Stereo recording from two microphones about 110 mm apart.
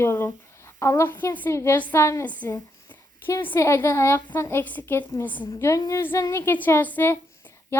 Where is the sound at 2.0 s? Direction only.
25° left (ahead or behind).